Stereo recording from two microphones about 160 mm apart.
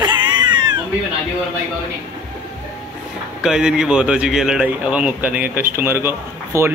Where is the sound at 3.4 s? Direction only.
5° right (ahead or behind).